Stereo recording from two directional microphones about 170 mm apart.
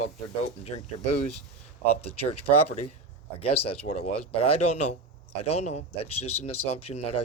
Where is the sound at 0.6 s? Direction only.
40° left (ahead or behind).